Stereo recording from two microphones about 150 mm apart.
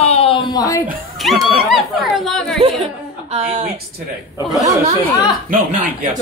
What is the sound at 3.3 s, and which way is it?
Speech, 45° right (ahead or behind).